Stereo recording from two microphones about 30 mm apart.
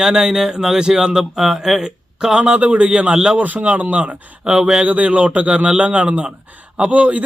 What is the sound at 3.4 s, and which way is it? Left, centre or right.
Speech, right.